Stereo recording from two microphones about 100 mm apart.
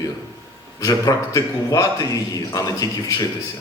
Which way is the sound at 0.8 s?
35° left (ahead or behind).